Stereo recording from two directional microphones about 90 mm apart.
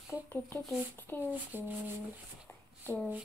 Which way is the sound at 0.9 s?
25° left (ahead or behind).